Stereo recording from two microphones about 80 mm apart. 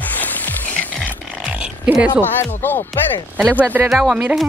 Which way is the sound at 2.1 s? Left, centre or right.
Left.